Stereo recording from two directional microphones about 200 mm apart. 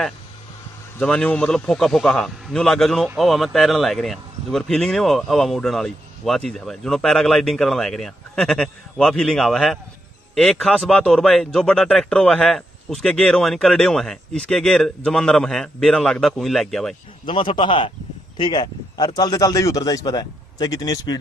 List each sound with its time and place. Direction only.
0.9 s a man's voice: 5° left (ahead or behind)
17.3 s a man's voice: 25° left (ahead or behind)